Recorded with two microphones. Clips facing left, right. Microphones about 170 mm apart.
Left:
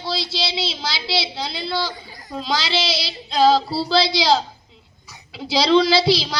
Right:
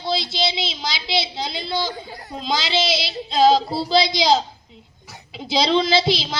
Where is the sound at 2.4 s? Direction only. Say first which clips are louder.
Right 1 dB; 20° right (ahead or behind).